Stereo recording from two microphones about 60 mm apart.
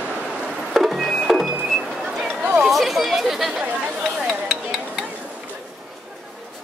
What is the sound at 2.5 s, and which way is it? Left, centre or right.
Chatter, centre.